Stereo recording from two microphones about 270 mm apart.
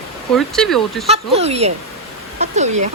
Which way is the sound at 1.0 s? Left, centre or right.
Right.